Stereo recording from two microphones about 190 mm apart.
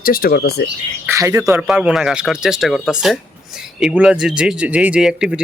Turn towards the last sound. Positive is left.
turn(degrees=-5)  # may be behind; listen again after turning